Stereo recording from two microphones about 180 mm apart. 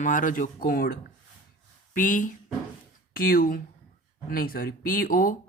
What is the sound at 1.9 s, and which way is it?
Speech, 50° left (ahead or behind).